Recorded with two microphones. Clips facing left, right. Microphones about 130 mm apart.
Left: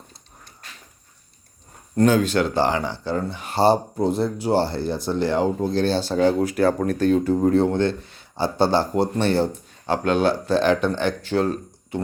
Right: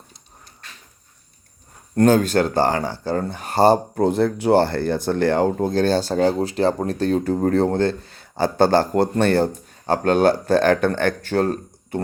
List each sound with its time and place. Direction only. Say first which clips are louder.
2.0 s speech: right 2 dB; 45° right (ahead or behind)
6.4 s a man's voice: even; 25° right (ahead or behind); by 11.9 s 45° right (ahead or behind)